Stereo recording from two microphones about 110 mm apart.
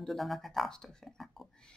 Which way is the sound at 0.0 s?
Centre (ahead or behind).